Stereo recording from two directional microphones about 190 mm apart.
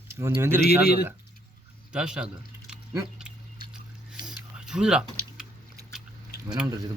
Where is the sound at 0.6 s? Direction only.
55° left (ahead or behind).